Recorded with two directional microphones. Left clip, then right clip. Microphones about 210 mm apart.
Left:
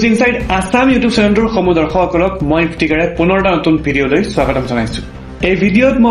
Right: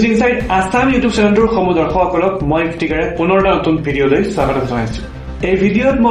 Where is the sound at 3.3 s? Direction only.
40° left (ahead or behind).